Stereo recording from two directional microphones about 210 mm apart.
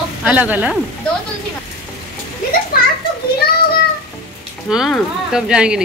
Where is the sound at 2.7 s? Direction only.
45° left (ahead or behind).